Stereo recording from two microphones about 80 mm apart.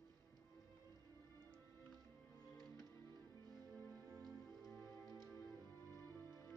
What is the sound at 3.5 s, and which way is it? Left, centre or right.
Music, right.